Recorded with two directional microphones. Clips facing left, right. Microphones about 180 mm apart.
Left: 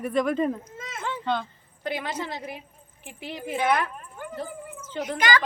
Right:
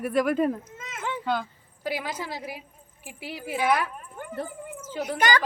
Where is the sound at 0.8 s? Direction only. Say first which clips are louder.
Left 2 dB; 35° left (ahead or behind).